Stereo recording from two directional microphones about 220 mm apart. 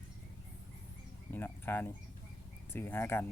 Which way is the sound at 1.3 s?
10° left (ahead or behind).